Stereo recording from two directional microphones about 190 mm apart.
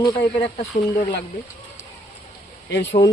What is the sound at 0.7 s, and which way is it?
Speech, 40° left (ahead or behind).